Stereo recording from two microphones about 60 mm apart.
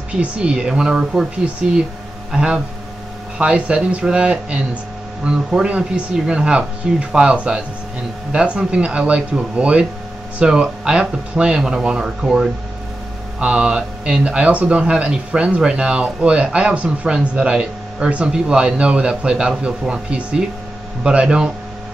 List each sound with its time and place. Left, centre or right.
0.1 s speech: centre
1.4 s speech: centre